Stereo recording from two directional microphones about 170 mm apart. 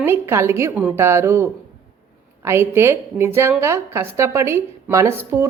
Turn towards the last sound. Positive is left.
turn(degrees=-15)  # may be behind; listen again after turning